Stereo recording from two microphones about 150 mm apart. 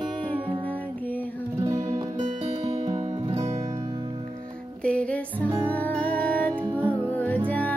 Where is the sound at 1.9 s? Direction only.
50° right (ahead or behind).